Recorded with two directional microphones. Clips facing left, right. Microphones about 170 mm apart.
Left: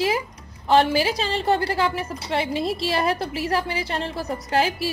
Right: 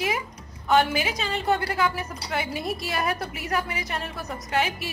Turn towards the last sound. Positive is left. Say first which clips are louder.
# left 4 dB
turn(degrees=30)  # may be behind; listen again after turning